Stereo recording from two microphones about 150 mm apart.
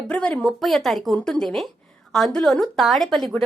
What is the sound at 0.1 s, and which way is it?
Speech, 10° left (ahead or behind).